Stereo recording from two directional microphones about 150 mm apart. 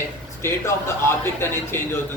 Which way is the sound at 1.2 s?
15° left (ahead or behind).